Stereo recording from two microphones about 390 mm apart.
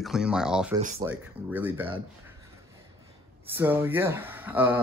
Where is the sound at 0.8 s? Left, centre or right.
Centre.